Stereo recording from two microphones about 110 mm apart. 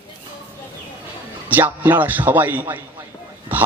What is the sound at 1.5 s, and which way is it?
Speech, 15° right (ahead or behind).